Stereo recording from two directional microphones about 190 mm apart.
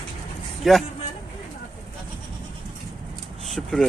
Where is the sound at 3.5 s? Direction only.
Centre (ahead or behind).